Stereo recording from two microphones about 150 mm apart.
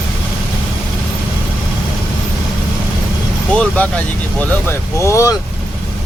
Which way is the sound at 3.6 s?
10° left (ahead or behind).